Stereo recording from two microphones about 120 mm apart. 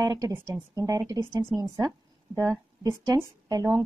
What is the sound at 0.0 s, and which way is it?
A woman's voice, 30° right (ahead or behind).